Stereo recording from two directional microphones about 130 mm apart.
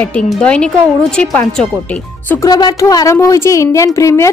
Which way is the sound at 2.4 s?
30° left (ahead or behind).